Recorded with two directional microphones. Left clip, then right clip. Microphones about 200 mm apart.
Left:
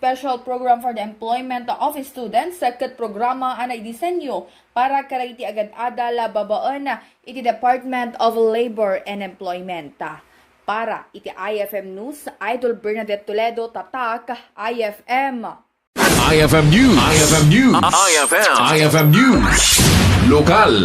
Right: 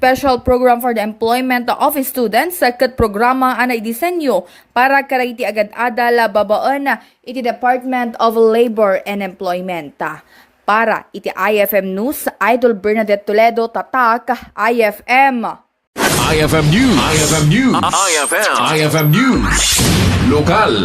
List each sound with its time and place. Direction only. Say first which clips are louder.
0.0 s speech: right 8 dB; 40° right (ahead or behind)
16.0 s speech: even; centre (ahead or behind)